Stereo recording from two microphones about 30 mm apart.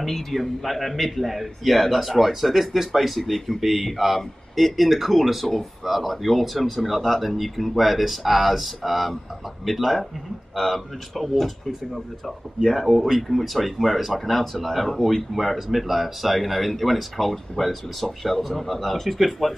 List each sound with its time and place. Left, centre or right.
0.0 s speech: centre
10.5 s speech: centre
14.4 s speech: centre
14.7 s speech: centre